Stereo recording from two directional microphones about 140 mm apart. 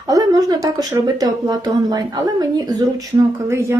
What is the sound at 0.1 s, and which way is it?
Speech, 25° right (ahead or behind).